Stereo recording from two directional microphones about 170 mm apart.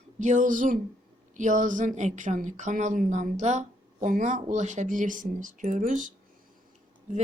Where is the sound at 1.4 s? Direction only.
50° right (ahead or behind).